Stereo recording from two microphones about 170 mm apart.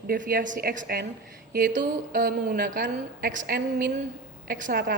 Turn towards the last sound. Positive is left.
turn(degrees=-55)  # may be behind; listen again after turning